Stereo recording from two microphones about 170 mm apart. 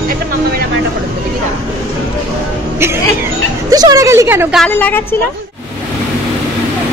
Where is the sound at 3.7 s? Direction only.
20° right (ahead or behind).